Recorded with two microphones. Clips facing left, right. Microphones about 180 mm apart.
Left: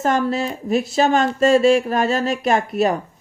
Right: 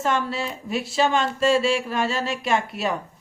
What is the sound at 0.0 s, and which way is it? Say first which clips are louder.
A man's voice: left 5 dB; 40° left (ahead or behind).